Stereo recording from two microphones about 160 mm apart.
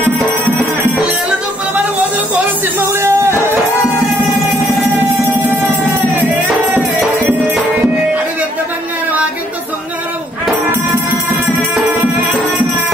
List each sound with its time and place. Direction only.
2.9 s music: 15° right (ahead or behind)
6.1 s music: 10° right (ahead or behind)